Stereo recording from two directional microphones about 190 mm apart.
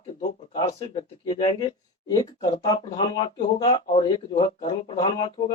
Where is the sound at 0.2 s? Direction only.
25° left (ahead or behind).